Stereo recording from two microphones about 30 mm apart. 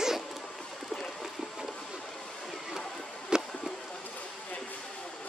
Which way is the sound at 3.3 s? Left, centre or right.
Right.